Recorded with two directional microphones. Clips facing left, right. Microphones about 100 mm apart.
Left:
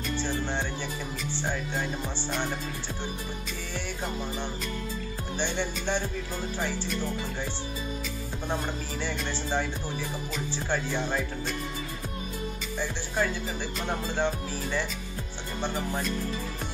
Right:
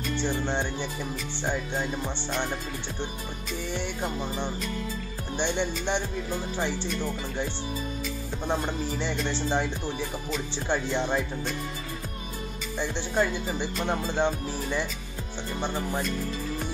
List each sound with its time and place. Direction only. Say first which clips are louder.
0.2 s speech: right 3 dB; 20° right (ahead or behind)
5.4 s speech: right 3 dB; 20° right (ahead or behind)
9.0 s speech: right 1 dB; 20° right (ahead or behind)
10.7 s speech: right 3 dB; 20° right (ahead or behind)
12.7 s speech: right 4 dB; 20° right (ahead or behind)
14.1 s music: right 2 dB; 15° right (ahead or behind)